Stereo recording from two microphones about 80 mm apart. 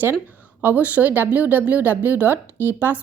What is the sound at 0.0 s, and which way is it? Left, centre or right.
A woman's voice, right.